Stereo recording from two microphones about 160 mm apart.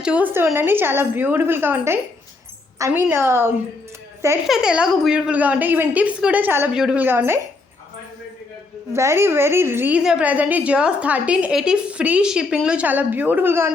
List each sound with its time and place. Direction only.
0.0 s a woman's voice: 10° right (ahead or behind)
4.4 s a woman's voice: 5° right (ahead or behind)
8.9 s a woman's voice: 15° right (ahead or behind)